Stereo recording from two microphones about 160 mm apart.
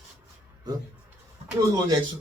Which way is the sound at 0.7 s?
25° right (ahead or behind).